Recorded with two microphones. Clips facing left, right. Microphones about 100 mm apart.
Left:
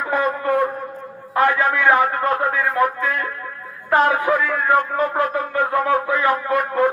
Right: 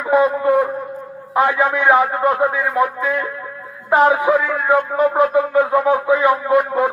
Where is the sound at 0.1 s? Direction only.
15° right (ahead or behind).